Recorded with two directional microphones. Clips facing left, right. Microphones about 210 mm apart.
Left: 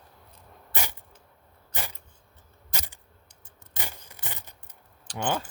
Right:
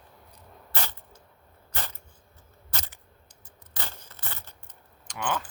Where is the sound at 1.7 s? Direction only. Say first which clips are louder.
Left 1 dB; 15° left (ahead or behind).